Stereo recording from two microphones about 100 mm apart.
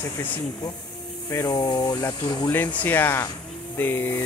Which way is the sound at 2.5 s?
20° left (ahead or behind).